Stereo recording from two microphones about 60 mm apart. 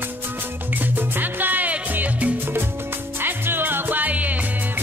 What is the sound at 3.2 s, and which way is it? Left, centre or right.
Music, right.